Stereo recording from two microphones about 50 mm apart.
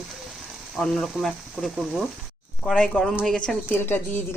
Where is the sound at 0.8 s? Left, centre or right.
Centre.